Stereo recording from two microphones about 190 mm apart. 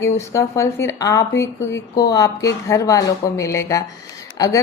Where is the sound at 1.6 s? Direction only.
75° left (ahead or behind).